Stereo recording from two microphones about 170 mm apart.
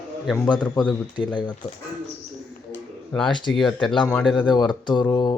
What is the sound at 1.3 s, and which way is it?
Speech, 25° left (ahead or behind).